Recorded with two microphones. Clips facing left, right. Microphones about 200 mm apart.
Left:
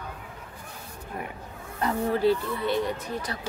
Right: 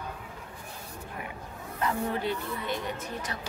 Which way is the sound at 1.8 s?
35° left (ahead or behind).